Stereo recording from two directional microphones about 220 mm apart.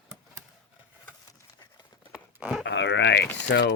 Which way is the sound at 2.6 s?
55° left (ahead or behind).